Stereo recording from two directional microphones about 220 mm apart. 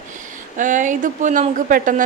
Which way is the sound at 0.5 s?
35° right (ahead or behind).